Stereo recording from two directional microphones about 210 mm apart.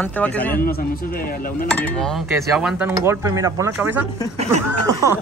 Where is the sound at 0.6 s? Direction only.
45° left (ahead or behind).